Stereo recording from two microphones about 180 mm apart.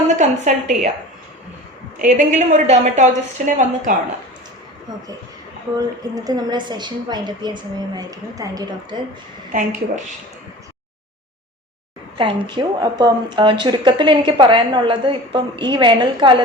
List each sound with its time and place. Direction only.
0.2 s a woman's voice: 40° right (ahead or behind)
2.0 s a woman's voice: 45° right (ahead or behind)
5.7 s a woman's voice: 20° right (ahead or behind)
9.5 s a woman's voice: 45° right (ahead or behind)
12.1 s a woman's voice: 30° right (ahead or behind)